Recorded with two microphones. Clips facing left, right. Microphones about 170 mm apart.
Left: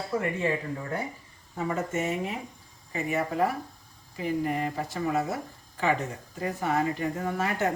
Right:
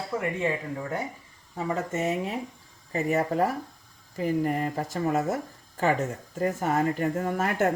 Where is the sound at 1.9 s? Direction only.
40° right (ahead or behind).